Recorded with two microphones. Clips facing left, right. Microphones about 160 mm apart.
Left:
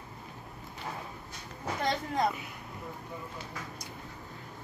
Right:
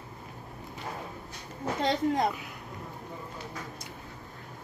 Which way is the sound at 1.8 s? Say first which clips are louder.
Right 4 dB; 20° right (ahead or behind).